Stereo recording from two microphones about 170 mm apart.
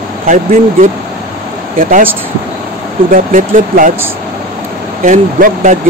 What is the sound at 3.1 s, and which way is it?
Speech, 50° right (ahead or behind).